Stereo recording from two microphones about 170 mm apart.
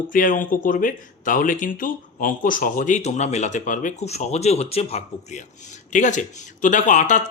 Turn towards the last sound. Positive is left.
turn(degrees=45)  # may be behind; listen again after turning